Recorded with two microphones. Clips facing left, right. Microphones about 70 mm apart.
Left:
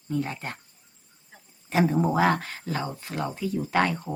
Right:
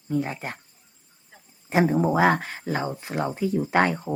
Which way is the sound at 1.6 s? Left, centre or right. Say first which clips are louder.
Right 2 dB; right.